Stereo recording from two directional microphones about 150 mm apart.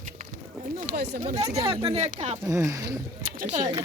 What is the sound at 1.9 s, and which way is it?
Speech, 45° right (ahead or behind).